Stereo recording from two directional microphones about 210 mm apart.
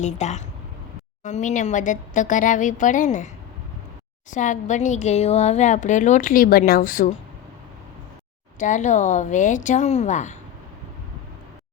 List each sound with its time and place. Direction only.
0.0 s speech: 35° left (ahead or behind)
4.3 s speech: 35° left (ahead or behind)
8.5 s speech: 35° left (ahead or behind)